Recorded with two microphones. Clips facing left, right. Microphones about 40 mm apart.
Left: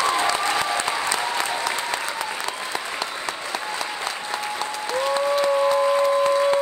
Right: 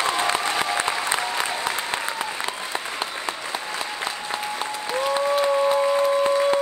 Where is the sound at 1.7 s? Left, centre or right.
Right.